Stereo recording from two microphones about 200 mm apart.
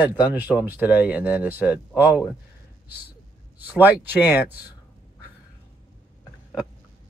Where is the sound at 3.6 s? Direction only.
10° right (ahead or behind).